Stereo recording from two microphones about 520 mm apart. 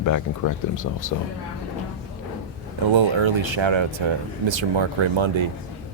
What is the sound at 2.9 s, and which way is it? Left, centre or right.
Speech, right.